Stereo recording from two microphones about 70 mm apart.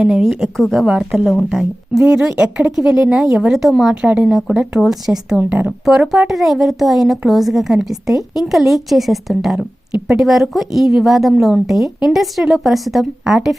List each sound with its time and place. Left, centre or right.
0.0 s a woman's voice: centre
4.1 s a woman's voice: centre
5.4 s speech: centre
5.8 s a woman's voice: centre